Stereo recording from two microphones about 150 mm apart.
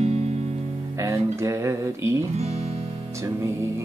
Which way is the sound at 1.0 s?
20° right (ahead or behind).